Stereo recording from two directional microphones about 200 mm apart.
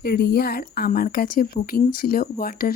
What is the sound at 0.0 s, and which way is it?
A woman's voice, 50° left (ahead or behind).